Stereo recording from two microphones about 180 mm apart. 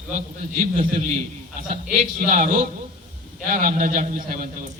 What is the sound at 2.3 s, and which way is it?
A man's voice, 45° right (ahead or behind).